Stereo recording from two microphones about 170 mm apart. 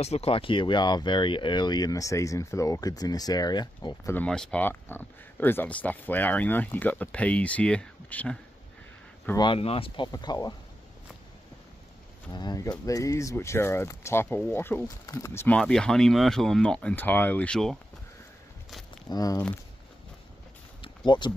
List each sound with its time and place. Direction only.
0.0 s speech: 35° left (ahead or behind)
4.1 s speech: 5° left (ahead or behind)
9.4 s speech: 30° left (ahead or behind)
12.3 s speech: 25° left (ahead or behind); by 17.7 s 5° left (ahead or behind)
19.0 s speech: 20° left (ahead or behind)
20.8 s a sound: 25° left (ahead or behind)